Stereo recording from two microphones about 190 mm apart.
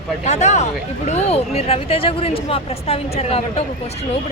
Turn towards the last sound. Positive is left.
turn(degrees=30)  # may be behind; listen again after turning